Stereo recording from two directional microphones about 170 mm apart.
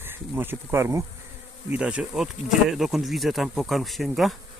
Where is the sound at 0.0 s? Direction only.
10° right (ahead or behind).